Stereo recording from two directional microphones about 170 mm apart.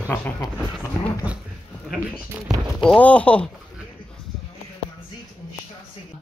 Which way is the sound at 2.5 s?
Centre (ahead or behind).